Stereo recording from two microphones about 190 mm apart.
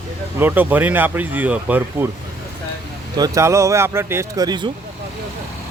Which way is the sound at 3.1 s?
20° right (ahead or behind).